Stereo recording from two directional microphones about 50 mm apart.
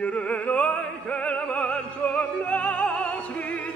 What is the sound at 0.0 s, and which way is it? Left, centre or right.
Opera, left.